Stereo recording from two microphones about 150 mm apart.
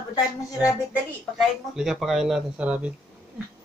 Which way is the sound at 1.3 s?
5° right (ahead or behind).